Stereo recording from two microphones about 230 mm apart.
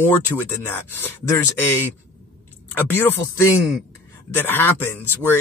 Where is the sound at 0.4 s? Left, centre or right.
Centre.